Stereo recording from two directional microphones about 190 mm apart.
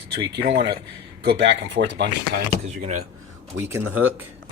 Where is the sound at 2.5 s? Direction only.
40° right (ahead or behind).